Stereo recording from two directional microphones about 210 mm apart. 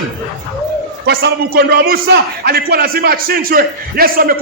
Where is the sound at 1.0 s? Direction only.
50° right (ahead or behind).